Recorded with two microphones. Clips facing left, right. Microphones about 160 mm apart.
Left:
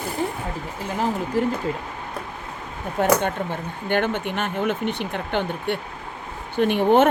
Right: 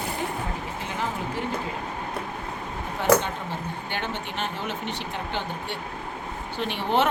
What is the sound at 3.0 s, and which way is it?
Speech, 55° left (ahead or behind).